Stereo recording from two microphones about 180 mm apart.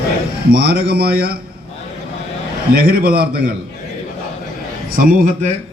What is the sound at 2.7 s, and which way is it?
Speech, 55° right (ahead or behind).